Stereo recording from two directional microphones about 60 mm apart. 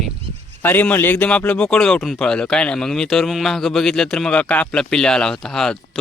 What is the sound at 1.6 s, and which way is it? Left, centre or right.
Speech, centre.